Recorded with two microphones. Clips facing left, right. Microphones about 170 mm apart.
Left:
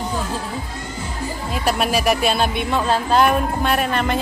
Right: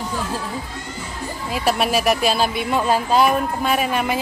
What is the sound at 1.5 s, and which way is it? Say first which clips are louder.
A woman's voice: right 1 dB; centre (ahead or behind).